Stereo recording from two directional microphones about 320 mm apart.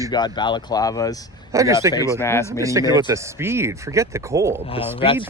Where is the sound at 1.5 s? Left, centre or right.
Centre.